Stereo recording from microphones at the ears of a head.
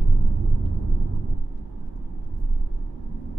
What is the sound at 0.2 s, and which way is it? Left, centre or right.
Vehicle, right.